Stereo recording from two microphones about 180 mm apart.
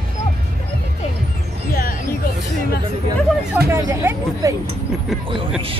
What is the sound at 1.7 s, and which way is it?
Music, 55° left (ahead or behind).